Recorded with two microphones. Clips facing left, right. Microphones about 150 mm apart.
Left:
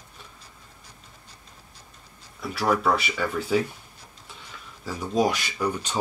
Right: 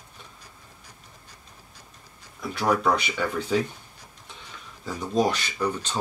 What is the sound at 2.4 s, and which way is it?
Speech, centre (ahead or behind).